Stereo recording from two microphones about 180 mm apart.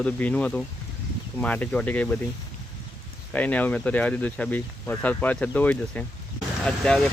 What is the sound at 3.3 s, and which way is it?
Speech, 10° left (ahead or behind).